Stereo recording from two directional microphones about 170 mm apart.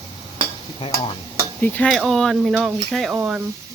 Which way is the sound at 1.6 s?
10° left (ahead or behind).